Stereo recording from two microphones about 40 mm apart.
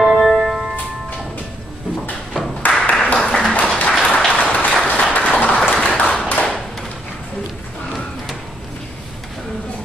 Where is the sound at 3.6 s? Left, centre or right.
Left.